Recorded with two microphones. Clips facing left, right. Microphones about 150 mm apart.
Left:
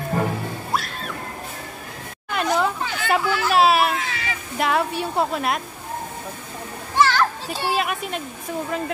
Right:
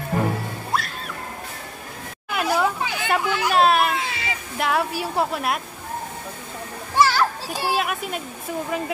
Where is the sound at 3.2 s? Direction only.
20° right (ahead or behind).